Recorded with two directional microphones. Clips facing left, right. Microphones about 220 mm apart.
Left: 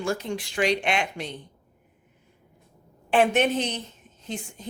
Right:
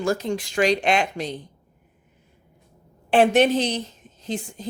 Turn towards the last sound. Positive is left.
turn(degrees=-35)  # may be behind; listen again after turning